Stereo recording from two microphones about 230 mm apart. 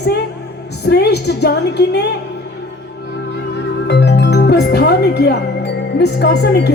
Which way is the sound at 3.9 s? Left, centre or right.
Left.